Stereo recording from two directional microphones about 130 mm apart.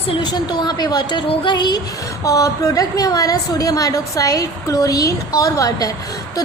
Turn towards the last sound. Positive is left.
turn(degrees=25)  # may be behind; listen again after turning